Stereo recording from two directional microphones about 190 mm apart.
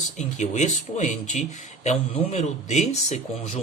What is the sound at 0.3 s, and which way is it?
Speech, 40° left (ahead or behind).